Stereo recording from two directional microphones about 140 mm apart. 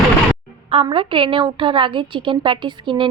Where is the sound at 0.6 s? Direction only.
40° right (ahead or behind).